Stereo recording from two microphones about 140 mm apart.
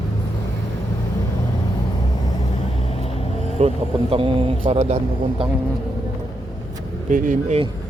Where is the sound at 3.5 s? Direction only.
45° right (ahead or behind).